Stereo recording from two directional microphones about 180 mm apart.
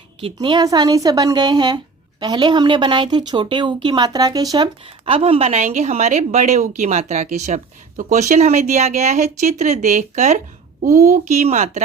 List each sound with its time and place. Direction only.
0.3 s speech: 25° right (ahead or behind); by 11.8 s 40° right (ahead or behind)